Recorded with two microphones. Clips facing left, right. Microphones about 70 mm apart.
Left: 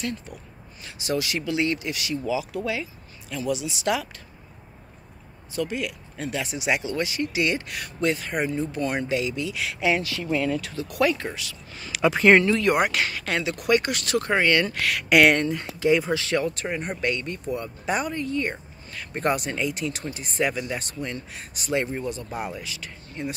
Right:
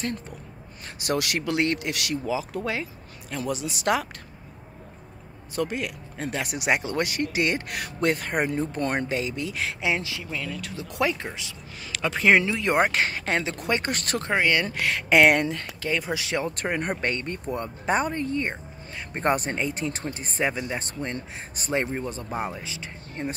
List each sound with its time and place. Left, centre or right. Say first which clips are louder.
1.0 s speech: even; right
2.2 s speech: left 3 dB; right
5.5 s speech: even; right
9.8 s speech: left 5 dB; right
10.2 s speech: left 8 dB; centre
10.8 s speech: left 2 dB; right
11.8 s speech: left 4 dB; centre
12.5 s speech: left 1 dB; right
14.2 s speech: left 1 dB; centre
15.5 s speech: left 7 dB; centre
16.1 s speech: left 3 dB; centre
16.5 s speech: right 2 dB; right
19.3 s speech: even; right